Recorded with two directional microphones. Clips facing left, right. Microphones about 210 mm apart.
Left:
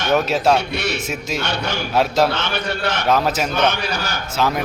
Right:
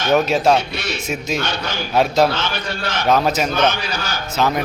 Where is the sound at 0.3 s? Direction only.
5° left (ahead or behind).